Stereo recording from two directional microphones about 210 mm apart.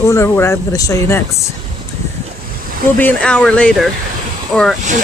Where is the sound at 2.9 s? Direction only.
5° left (ahead or behind).